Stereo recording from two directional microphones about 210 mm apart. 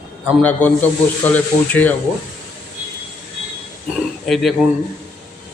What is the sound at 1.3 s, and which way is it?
Speech, 10° left (ahead or behind).